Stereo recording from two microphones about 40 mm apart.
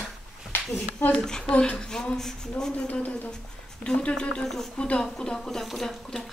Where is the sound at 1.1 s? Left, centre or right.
Centre.